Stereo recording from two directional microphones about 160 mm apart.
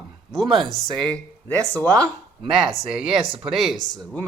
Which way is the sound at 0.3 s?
Centre (ahead or behind).